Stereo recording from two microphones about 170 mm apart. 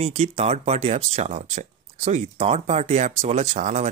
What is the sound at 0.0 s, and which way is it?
Speech, 40° right (ahead or behind).